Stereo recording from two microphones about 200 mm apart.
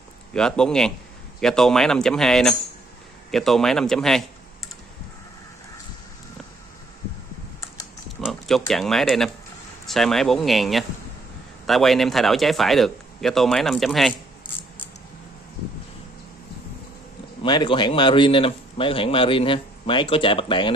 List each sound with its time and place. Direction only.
0.3 s speech: 5° left (ahead or behind)
8.2 s speech: centre (ahead or behind)
17.4 s a man's voice: 25° left (ahead or behind)